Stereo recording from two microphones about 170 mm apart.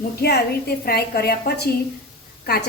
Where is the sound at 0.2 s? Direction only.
70° left (ahead or behind).